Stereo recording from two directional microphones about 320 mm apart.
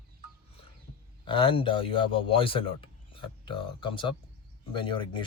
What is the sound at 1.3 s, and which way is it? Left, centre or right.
Speech, centre.